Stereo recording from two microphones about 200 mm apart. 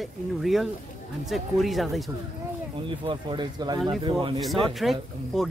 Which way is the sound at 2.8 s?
25° right (ahead or behind).